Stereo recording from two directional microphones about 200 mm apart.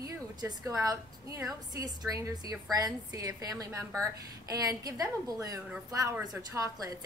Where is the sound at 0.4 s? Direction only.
20° right (ahead or behind).